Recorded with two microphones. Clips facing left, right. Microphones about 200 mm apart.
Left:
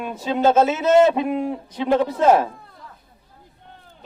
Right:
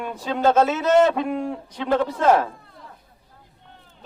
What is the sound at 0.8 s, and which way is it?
A man's voice, 5° left (ahead or behind).